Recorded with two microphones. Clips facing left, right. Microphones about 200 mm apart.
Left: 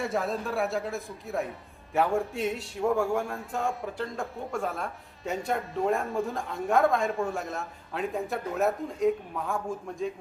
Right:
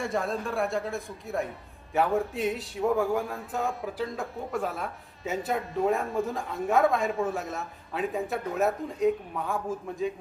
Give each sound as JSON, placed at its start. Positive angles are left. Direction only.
{"t": 0.0, "sound": "a man's voice", "side_deg": 0}